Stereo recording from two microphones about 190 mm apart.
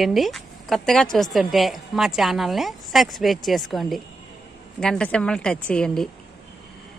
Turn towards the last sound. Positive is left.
turn(degrees=5)  # may be behind; listen again after turning